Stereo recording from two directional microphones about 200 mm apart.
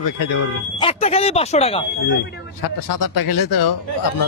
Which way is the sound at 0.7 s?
30° left (ahead or behind).